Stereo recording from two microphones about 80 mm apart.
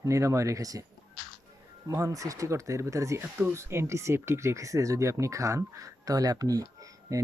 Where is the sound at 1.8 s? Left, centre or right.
Right.